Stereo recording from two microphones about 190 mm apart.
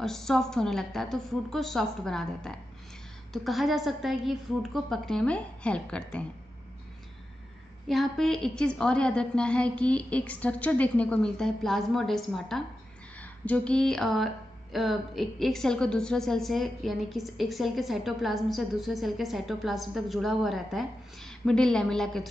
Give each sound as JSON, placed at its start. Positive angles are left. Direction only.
{"t": 0.0, "sound": "speech", "side_deg": 0}
{"t": 7.9, "sound": "speech", "side_deg": 0}